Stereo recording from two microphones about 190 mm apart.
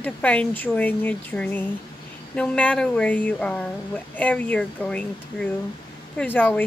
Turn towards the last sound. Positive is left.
turn(degrees=10)  # may be behind; listen again after turning